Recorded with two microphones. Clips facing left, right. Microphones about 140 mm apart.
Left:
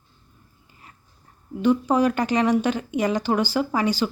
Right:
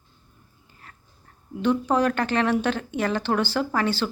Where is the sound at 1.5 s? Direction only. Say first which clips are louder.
Left 2 dB; 5° left (ahead or behind).